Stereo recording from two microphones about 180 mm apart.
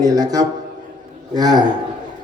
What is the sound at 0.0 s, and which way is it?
A man's voice, 20° right (ahead or behind).